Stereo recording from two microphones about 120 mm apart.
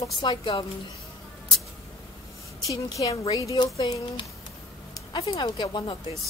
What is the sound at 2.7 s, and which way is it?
Speech, 30° left (ahead or behind).